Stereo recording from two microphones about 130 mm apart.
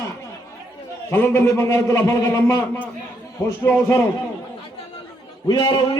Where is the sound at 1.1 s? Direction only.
15° left (ahead or behind).